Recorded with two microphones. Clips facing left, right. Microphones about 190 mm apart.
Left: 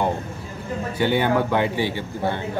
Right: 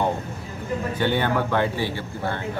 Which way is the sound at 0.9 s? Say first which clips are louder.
Left 4 dB; 10° left (ahead or behind).